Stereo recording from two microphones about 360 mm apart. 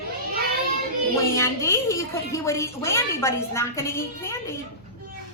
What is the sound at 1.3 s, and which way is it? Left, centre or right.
A woman's voice, centre.